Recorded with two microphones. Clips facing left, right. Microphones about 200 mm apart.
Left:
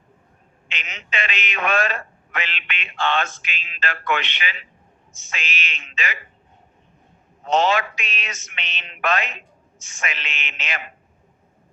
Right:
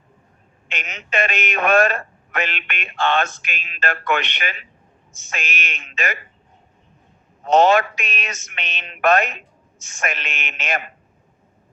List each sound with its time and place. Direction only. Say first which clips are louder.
0.7 s a man's voice: right 5 dB; 50° right (ahead or behind)
7.4 s a man's voice: right 5 dB; 50° right (ahead or behind)